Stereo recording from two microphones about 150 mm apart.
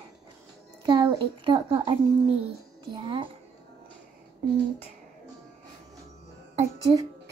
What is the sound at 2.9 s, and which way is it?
Speech, 35° right (ahead or behind).